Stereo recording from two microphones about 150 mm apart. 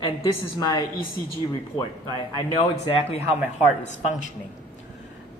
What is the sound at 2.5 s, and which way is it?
Speech, 40° left (ahead or behind).